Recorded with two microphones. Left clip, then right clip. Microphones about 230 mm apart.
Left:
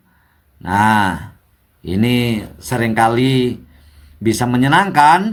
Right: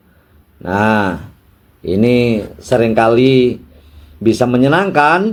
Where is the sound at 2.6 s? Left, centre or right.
Left.